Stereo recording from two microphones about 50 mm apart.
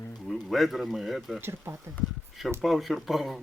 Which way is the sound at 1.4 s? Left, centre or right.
Right.